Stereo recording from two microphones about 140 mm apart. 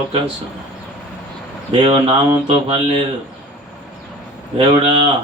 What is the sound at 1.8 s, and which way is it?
Mantra, 40° right (ahead or behind).